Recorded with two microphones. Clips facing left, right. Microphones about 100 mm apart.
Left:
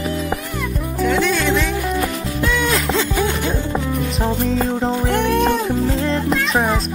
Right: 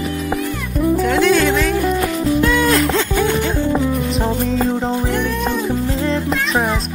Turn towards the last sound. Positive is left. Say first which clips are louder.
# even
turn(degrees=0)  # may be behind; listen again after turning